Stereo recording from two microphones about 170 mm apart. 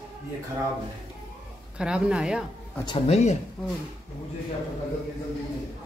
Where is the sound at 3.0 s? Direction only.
40° left (ahead or behind).